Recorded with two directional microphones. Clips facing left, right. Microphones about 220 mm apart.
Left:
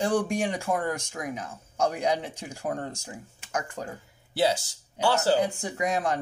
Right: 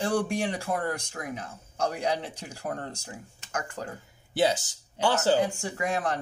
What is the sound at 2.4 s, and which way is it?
Speech, 20° left (ahead or behind).